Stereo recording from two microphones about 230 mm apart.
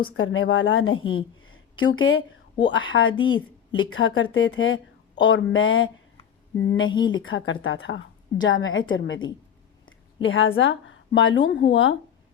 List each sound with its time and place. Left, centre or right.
0.2 s a woman's voice: left
0.9 s a woman's voice: left
1.4 s a sound: left
2.0 s a woman's voice: left
3.1 s a woman's voice: left
3.8 s a woman's voice: left
6.9 s a woman's voice: centre
7.2 s a woman's voice: left